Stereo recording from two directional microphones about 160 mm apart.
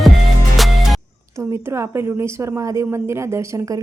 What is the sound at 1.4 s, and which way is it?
A woman's voice, 15° right (ahead or behind).